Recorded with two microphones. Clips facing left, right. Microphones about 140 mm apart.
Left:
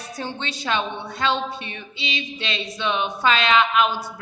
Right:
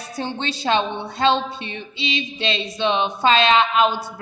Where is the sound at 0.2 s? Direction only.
30° right (ahead or behind).